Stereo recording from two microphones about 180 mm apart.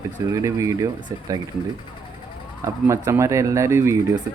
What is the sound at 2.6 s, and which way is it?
A man's voice, 15° right (ahead or behind).